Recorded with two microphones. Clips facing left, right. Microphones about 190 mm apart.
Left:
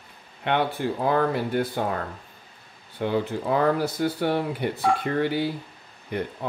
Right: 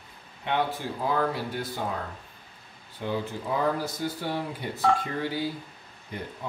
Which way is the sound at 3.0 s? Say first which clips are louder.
Left 6 dB; 65° left (ahead or behind).